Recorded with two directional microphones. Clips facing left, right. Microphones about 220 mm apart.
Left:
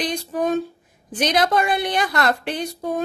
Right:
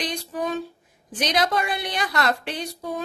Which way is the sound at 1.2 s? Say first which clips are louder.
Left 4 dB; 50° left (ahead or behind).